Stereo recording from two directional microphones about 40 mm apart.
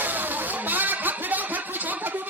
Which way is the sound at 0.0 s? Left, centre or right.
Right.